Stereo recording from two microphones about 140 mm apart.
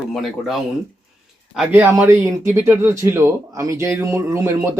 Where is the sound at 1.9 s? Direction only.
20° right (ahead or behind).